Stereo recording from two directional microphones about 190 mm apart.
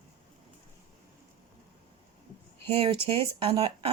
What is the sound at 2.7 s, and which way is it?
Speech, 25° right (ahead or behind).